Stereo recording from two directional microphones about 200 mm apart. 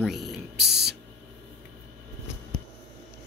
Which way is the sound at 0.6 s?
55° right (ahead or behind).